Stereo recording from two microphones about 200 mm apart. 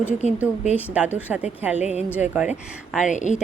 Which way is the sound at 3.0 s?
35° left (ahead or behind).